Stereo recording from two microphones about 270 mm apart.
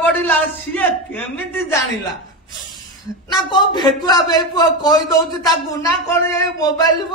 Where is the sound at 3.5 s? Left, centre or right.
Centre.